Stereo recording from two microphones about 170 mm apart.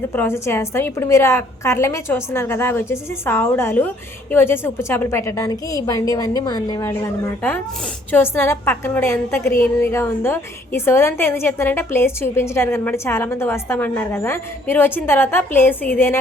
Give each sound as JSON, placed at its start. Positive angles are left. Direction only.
{"t": 0.1, "sound": "a woman's voice", "side_deg": 15}